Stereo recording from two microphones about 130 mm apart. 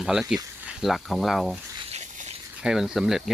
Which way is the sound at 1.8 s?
55° right (ahead or behind).